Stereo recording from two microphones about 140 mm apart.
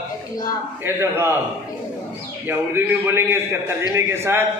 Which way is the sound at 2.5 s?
15° right (ahead or behind).